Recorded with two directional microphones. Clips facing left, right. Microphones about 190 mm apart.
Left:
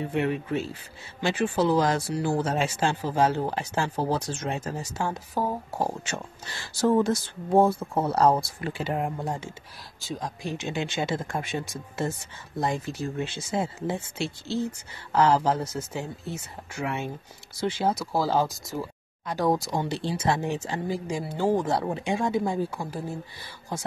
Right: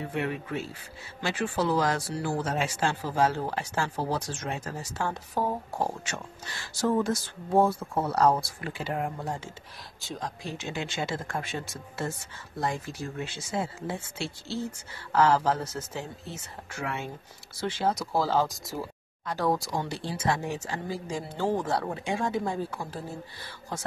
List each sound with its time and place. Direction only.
0.1 s speech: 25° left (ahead or behind)
5.3 s speech: centre (ahead or behind)
6.0 s speech: 30° left (ahead or behind)
9.9 s speech: 5° left (ahead or behind)
10.4 s speech: 15° left (ahead or behind)
13.2 s speech: 20° left (ahead or behind)